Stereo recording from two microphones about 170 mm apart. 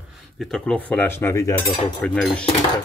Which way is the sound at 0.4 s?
Centre (ahead or behind).